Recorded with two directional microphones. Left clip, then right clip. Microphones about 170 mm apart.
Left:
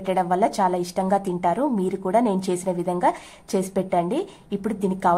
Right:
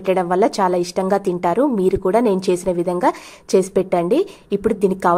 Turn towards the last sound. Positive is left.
turn(degrees=-25)  # may be behind; listen again after turning